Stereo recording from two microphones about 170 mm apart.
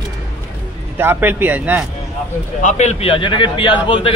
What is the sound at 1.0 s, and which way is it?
Speech, 10° right (ahead or behind).